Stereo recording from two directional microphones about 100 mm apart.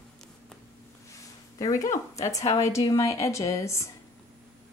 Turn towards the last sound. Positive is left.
turn(degrees=30)  # may be behind; listen again after turning